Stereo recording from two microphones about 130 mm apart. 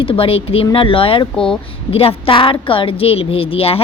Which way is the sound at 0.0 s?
45° left (ahead or behind).